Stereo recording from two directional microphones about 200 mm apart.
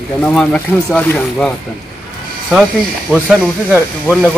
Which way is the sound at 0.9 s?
5° left (ahead or behind).